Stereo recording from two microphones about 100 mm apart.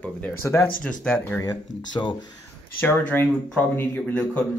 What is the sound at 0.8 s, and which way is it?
Speech, 10° left (ahead or behind).